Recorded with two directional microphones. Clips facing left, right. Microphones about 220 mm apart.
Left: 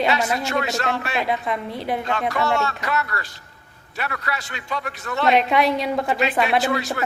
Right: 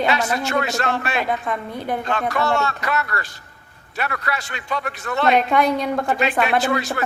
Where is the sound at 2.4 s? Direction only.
55° right (ahead or behind).